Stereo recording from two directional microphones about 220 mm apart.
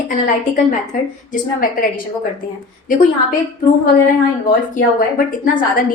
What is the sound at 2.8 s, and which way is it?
Speech, 40° left (ahead or behind).